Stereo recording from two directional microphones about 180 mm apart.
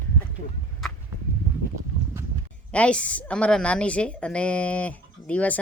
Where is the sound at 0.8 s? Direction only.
Centre (ahead or behind).